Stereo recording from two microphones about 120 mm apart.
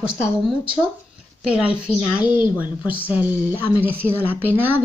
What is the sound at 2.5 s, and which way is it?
A woman's voice, 10° right (ahead or behind).